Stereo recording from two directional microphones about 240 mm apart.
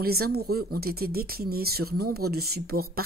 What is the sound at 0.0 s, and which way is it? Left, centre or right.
Speech, right.